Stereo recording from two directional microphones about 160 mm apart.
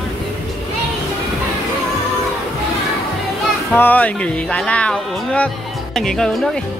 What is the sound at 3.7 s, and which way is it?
Speech, 10° left (ahead or behind).